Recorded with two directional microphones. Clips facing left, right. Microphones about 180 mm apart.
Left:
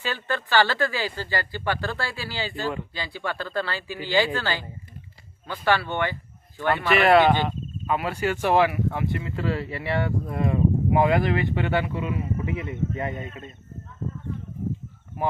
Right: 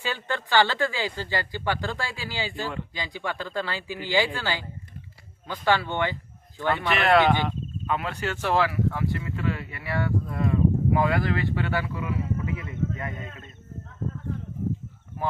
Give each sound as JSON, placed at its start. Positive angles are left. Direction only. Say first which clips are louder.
{"t": 0.0, "sound": "speech", "louder": "left 1 dB", "side_deg": -15}
{"t": 6.8, "sound": "speech", "louder": "left 3 dB", "side_deg": 5}
{"t": 9.3, "sound": "speech", "louder": "left 3 dB", "side_deg": 35}